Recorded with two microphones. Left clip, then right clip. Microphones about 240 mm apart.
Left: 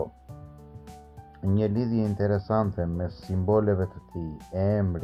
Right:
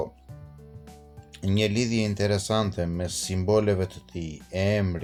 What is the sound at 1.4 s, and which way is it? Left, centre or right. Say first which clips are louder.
Speech: right 2 dB; right.